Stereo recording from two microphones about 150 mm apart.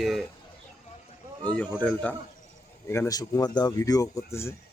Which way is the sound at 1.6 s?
5° left (ahead or behind).